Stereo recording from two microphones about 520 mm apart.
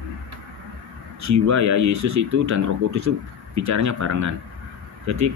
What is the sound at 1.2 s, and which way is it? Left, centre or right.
Speech, right.